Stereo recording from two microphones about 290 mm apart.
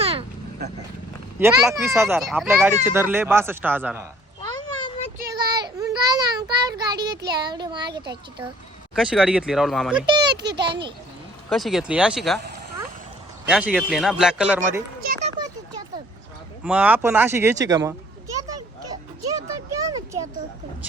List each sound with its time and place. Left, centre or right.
0.0 s vehicle: centre
1.4 s speech: centre
4.4 s a sound: centre
5.2 s child singing: centre
6.7 s speech: centre
9.0 s speech: centre
10.6 s speech: centre
11.4 s speech: centre
13.4 s speech: centre
15.0 s a sound: right
16.6 s speech: centre
19.4 s a sound: centre